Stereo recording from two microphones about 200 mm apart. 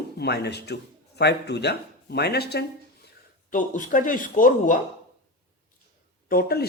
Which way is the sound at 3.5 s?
40° left (ahead or behind).